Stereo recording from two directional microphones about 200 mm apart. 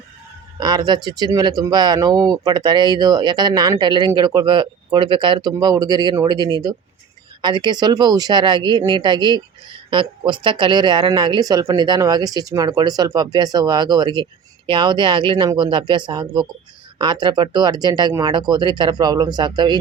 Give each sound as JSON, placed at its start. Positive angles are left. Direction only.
{"t": 0.6, "sound": "speech", "side_deg": -20}